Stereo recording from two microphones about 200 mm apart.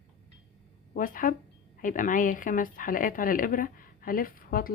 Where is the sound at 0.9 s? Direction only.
45° left (ahead or behind).